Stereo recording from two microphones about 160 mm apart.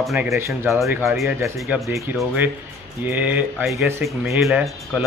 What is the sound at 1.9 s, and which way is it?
Speech, 15° right (ahead or behind).